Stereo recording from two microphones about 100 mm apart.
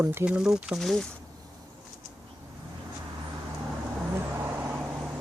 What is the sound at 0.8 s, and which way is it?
Speech, 5° left (ahead or behind).